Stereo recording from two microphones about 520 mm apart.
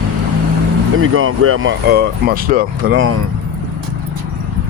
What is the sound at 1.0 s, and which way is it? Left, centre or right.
Speech, right.